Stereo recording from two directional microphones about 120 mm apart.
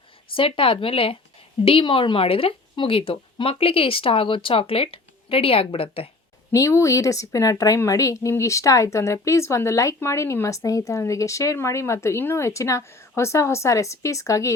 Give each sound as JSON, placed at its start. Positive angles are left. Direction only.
{"t": 0.3, "sound": "a woman's voice", "side_deg": 50}
{"t": 6.5, "sound": "speech", "side_deg": 25}